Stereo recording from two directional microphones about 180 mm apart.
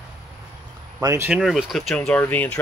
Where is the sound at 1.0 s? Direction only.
15° right (ahead or behind).